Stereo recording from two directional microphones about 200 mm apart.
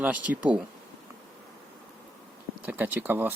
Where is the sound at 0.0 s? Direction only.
5° right (ahead or behind).